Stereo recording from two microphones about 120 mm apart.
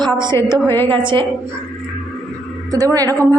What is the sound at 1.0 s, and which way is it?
Speech, 40° right (ahead or behind).